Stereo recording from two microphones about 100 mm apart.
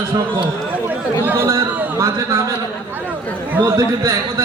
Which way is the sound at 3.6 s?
35° right (ahead or behind).